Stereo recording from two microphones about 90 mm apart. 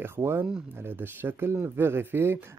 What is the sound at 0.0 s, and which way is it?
Speech, 25° right (ahead or behind).